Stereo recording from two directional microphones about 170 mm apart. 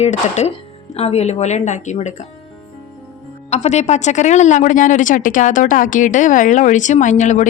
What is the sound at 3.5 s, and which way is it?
Speech, 40° left (ahead or behind).